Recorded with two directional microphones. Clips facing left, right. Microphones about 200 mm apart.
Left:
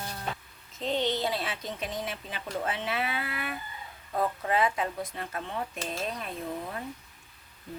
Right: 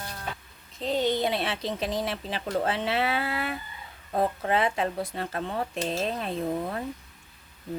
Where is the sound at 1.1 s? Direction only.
20° right (ahead or behind).